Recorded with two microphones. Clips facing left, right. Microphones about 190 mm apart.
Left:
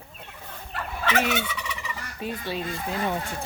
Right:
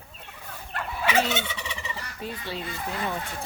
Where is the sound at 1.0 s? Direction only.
20° right (ahead or behind).